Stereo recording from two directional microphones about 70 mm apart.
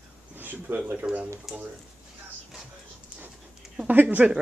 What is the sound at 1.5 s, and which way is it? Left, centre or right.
Speech, centre.